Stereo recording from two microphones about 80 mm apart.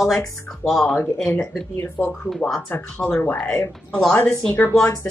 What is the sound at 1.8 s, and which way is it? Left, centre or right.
Speech, left.